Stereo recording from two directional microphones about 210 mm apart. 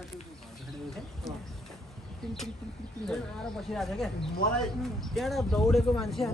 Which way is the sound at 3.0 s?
Centre (ahead or behind).